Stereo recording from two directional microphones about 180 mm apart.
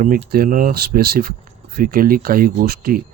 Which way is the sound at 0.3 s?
55° right (ahead or behind).